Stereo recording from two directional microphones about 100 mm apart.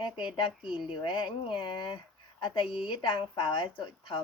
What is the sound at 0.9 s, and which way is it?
Speech, 55° left (ahead or behind).